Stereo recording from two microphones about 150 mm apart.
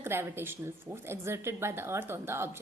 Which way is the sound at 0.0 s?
15° right (ahead or behind).